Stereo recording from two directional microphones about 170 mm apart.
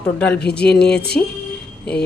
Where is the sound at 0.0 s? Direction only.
5° left (ahead or behind).